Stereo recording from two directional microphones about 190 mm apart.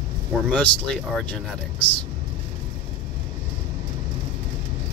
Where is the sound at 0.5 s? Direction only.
5° left (ahead or behind).